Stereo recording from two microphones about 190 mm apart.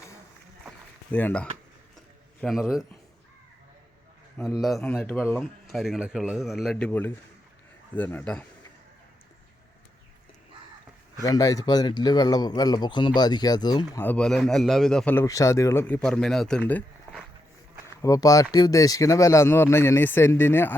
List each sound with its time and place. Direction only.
1.1 s a man's voice: 10° left (ahead or behind)
4.6 s a man's voice: centre (ahead or behind)
11.2 s a man's voice: 20° left (ahead or behind)
14.0 s speech: 5° left (ahead or behind)
16.0 s speech: 5° left (ahead or behind)
17.8 s speech: 15° left (ahead or behind)